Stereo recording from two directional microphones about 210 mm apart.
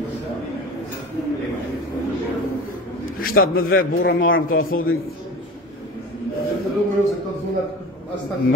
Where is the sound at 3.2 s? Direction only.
45° left (ahead or behind).